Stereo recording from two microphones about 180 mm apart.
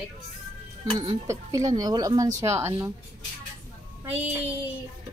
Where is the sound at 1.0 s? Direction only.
20° right (ahead or behind).